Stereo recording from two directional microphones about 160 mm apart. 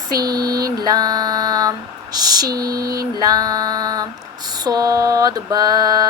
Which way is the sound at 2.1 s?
25° right (ahead or behind).